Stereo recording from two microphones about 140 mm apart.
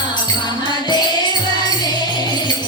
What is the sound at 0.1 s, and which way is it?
Music, 30° left (ahead or behind).